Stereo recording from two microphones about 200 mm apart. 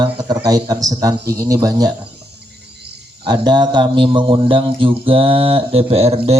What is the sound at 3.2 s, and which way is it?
A man's voice, 20° right (ahead or behind).